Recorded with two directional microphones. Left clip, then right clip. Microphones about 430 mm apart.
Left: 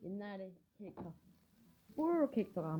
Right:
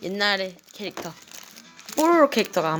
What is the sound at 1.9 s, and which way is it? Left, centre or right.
Speech, centre.